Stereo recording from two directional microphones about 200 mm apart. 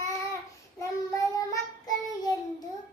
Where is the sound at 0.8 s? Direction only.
15° left (ahead or behind).